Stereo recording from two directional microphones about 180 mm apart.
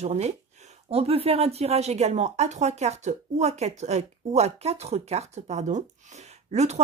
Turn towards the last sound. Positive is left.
turn(degrees=-40)  # may be behind; listen again after turning